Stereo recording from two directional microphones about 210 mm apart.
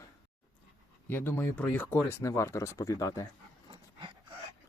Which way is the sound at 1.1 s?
10° left (ahead or behind).